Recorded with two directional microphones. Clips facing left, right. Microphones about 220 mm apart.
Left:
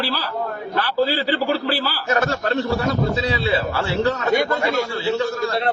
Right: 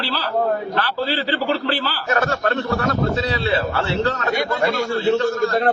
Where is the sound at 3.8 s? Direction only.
10° left (ahead or behind).